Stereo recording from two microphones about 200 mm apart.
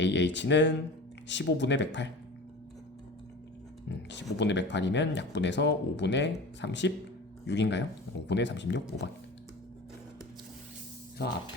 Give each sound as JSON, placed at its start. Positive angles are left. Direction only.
{"t": 0.0, "sound": "speech", "side_deg": 60}
{"t": 3.8, "sound": "speech", "side_deg": 60}
{"t": 11.2, "sound": "speech", "side_deg": 55}